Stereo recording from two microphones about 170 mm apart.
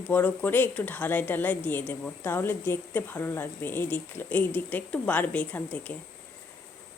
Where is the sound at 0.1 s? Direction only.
10° left (ahead or behind).